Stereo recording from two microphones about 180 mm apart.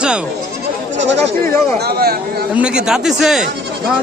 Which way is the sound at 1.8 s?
60° right (ahead or behind).